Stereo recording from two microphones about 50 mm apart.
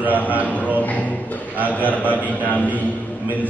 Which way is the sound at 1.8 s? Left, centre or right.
Left.